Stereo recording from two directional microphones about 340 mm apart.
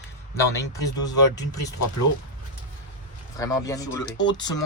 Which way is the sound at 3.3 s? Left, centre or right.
Centre.